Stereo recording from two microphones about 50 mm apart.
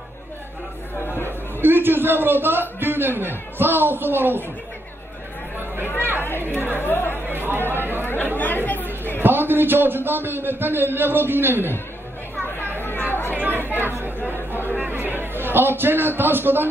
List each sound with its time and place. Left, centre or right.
1.0 s chatter: left
1.6 s a man's voice: right
6.6 s speech: left
7.2 s chatter: right
7.7 s a man's voice: right
8.0 s chatter: left
9.2 s a man's voice: right
12.5 s chatter: left
13.4 s chatter: right
13.7 s chatter: left
14.9 s a man's voice: right